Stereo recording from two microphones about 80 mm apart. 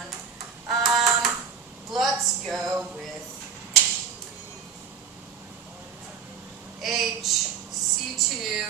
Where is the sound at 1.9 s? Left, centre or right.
Centre.